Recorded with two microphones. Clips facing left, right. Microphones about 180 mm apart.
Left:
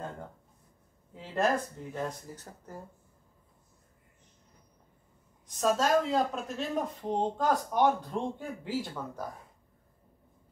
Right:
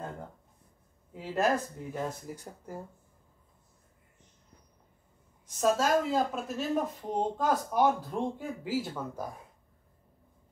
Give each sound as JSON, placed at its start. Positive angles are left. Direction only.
{"t": 1.1, "sound": "speech", "side_deg": -10}
{"t": 5.6, "sound": "speech", "side_deg": -5}